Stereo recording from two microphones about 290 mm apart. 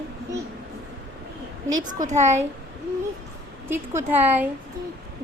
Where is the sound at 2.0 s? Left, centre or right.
Right.